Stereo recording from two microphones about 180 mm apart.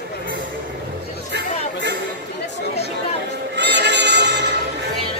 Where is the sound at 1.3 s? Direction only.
70° right (ahead or behind).